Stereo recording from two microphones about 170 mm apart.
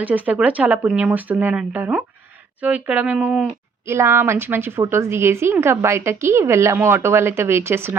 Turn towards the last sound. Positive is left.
turn(degrees=-15)  # may be behind; listen again after turning